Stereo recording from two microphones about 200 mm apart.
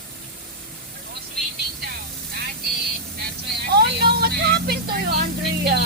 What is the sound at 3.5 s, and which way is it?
Vehicle, 55° right (ahead or behind).